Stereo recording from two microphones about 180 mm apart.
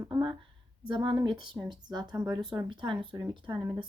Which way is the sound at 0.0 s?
25° right (ahead or behind).